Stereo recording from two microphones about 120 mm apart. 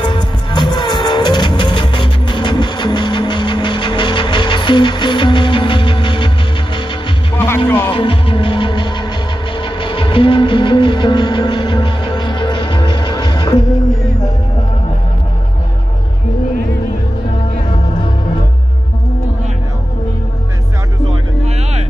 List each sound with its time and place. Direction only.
0.0 s music: 40° left (ahead or behind)
7.3 s music: 20° left (ahead or behind)
7.9 s music: 45° left (ahead or behind)